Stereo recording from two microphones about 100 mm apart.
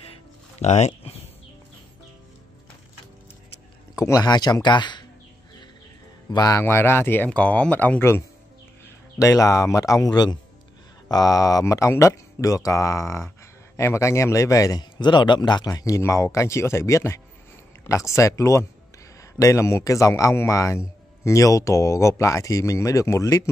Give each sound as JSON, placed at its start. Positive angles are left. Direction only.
{"t": 0.6, "sound": "speech", "side_deg": 90}
{"t": 3.9, "sound": "speech", "side_deg": 35}
{"t": 6.3, "sound": "a man's voice", "side_deg": 40}
{"t": 6.6, "sound": "speech", "side_deg": 25}
{"t": 9.2, "sound": "a man's voice", "side_deg": 35}